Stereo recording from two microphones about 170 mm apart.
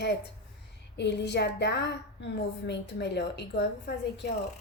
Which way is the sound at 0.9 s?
90° left.